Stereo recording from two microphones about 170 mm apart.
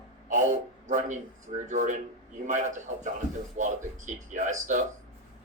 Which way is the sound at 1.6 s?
45° right (ahead or behind).